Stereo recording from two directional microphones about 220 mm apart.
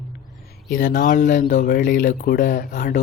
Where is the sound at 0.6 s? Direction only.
40° left (ahead or behind).